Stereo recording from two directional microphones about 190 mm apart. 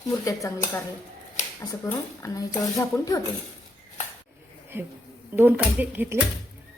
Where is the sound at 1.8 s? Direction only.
15° left (ahead or behind).